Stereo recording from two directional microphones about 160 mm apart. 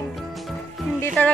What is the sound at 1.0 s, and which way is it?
Speech, 10° left (ahead or behind).